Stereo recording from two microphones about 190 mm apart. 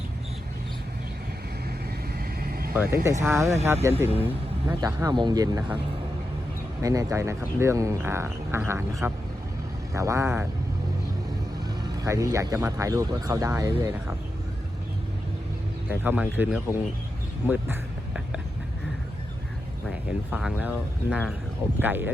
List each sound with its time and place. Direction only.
2.1 s vehicle: 50° right (ahead or behind)
2.7 s speech: 10° right (ahead or behind)
6.8 s speech: 15° right (ahead or behind)
12.0 s speech: 15° right (ahead or behind)
15.9 s speech: 10° right (ahead or behind)
20.1 s speech: 5° right (ahead or behind)